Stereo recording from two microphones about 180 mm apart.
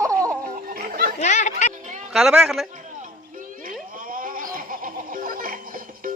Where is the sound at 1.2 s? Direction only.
40° left (ahead or behind).